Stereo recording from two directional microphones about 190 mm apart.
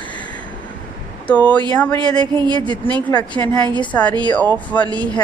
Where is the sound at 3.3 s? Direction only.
5° left (ahead or behind).